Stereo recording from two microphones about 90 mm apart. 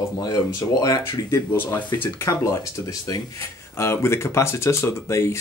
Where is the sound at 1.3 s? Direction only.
30° left (ahead or behind).